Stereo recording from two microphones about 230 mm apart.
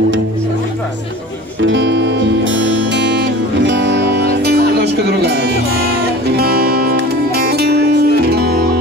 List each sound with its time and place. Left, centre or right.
1.6 s music: right